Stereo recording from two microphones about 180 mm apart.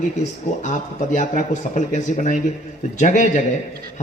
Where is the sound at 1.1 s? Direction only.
45° left (ahead or behind).